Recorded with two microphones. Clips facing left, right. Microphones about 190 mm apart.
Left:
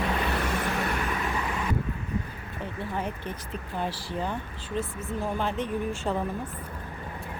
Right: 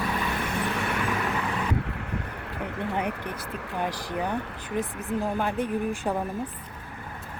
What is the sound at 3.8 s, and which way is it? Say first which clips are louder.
Speech: right 3 dB; 15° right (ahead or behind).